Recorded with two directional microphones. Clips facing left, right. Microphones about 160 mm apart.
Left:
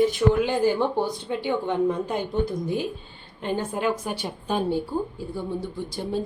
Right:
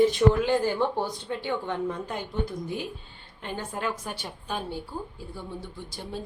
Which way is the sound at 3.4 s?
20° left (ahead or behind).